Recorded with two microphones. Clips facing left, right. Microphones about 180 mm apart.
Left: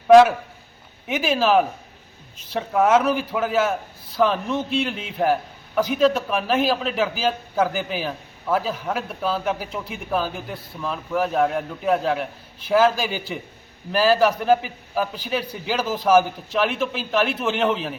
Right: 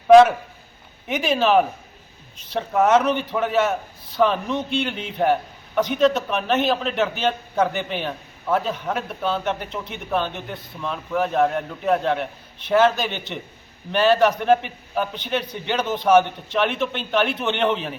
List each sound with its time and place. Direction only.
0.1 s a man's voice: centre (ahead or behind)